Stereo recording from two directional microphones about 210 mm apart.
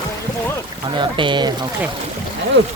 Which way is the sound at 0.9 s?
20° right (ahead or behind).